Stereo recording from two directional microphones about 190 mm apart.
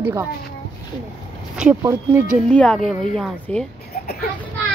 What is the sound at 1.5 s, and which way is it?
Speech, 5° right (ahead or behind).